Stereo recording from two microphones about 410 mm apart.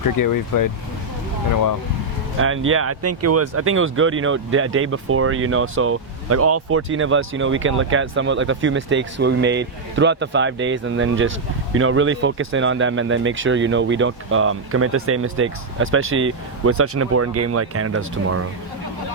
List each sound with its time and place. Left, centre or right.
0.0 s speech: left
2.4 s speech: right